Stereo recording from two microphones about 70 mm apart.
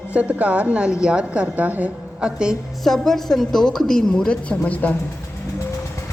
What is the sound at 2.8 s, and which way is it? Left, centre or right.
A woman's voice, centre.